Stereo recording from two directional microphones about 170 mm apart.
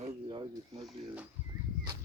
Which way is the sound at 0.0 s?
30° right (ahead or behind).